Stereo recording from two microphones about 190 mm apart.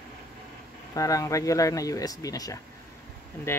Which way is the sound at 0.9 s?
20° left (ahead or behind).